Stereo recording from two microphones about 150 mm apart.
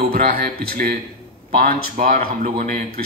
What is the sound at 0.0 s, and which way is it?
Speech, 75° right (ahead or behind).